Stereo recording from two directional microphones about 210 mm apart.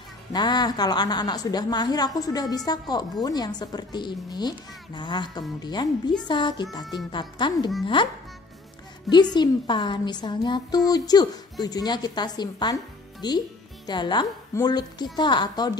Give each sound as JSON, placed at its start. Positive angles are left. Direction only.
{"t": 0.3, "sound": "a woman's voice", "side_deg": 20}
{"t": 9.1, "sound": "a woman's voice", "side_deg": 20}